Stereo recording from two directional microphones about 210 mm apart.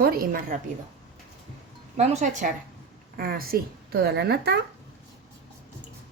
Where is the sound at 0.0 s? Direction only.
45° right (ahead or behind).